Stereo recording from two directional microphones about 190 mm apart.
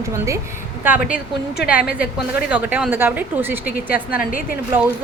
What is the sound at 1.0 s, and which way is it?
Speech, 55° left (ahead or behind).